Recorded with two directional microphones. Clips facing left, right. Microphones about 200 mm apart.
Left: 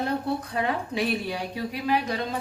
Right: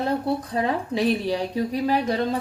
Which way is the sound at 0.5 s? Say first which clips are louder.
Right 3 dB; 35° right (ahead or behind).